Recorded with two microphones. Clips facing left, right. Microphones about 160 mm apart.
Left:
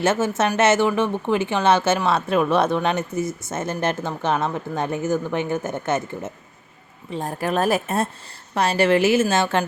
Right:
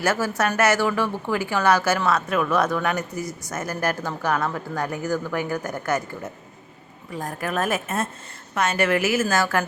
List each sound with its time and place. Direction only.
0.0 s speech: 25° left (ahead or behind)